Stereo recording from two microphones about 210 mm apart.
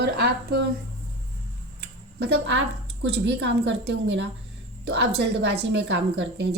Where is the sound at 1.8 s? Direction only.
55° right (ahead or behind).